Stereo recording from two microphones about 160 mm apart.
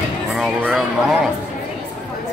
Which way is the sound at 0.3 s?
Centre (ahead or behind).